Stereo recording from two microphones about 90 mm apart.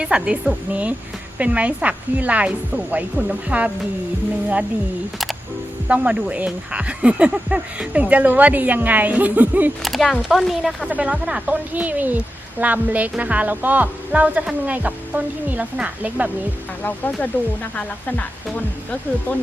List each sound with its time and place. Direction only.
0.0 s a woman's voice: 10° right (ahead or behind)
5.9 s a woman's voice: 15° right (ahead or behind)
9.8 s speech: centre (ahead or behind)
10.8 s a woman's voice: 15° right (ahead or behind)
16.8 s speech: 20° left (ahead or behind)